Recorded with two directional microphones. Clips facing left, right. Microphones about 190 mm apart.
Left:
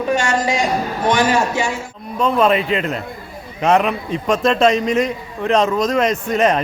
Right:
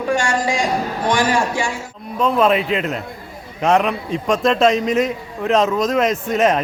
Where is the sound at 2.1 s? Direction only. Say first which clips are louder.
Even; centre (ahead or behind).